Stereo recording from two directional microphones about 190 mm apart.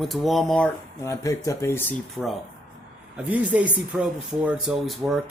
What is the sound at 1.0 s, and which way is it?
Speech, 15° left (ahead or behind).